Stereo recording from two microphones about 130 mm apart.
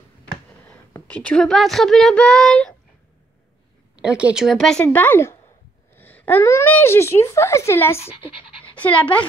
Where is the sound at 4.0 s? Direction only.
10° right (ahead or behind).